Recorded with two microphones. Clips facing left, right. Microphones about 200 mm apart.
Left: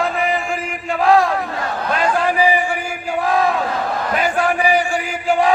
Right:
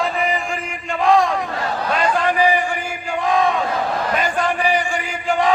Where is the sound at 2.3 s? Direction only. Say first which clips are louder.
Left 1 dB; 10° left (ahead or behind).